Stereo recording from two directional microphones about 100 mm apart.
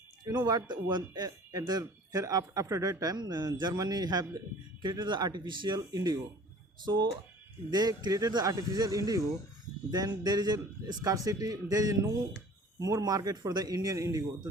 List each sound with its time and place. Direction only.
0.3 s speech: 40° right (ahead or behind)